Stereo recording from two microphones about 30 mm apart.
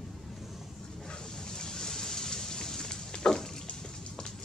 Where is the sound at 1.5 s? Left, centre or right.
Left.